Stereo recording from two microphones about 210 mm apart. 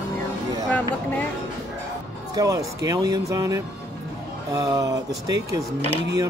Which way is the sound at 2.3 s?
15° right (ahead or behind).